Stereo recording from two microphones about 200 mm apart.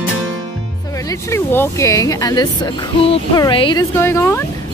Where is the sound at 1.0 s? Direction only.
15° left (ahead or behind).